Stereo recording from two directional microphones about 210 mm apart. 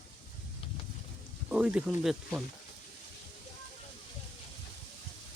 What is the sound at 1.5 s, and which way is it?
Speech, 5° right (ahead or behind).